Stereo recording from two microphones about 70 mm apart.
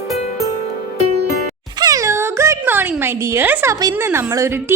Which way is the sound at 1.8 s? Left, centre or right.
Right.